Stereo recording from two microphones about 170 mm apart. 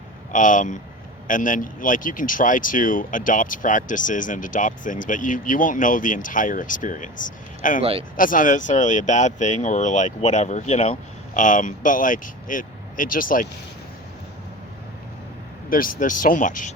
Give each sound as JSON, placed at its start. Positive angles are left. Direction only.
{"t": 0.3, "sound": "speech", "side_deg": 50}
{"t": 7.8, "sound": "speech", "side_deg": -35}
{"t": 8.1, "sound": "speech", "side_deg": 50}
{"t": 15.7, "sound": "speech", "side_deg": 55}